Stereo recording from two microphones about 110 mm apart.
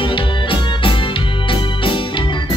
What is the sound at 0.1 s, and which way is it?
Organ, 50° left (ahead or behind).